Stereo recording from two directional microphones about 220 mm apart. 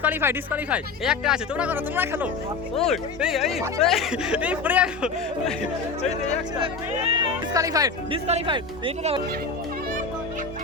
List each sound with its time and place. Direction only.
0.0 s speech: 10° right (ahead or behind)
2.7 s speech: centre (ahead or behind)
6.6 s speech: 20° right (ahead or behind)